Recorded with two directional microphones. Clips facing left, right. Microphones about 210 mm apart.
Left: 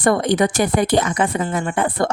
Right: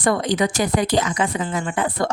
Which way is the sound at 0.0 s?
55° left (ahead or behind).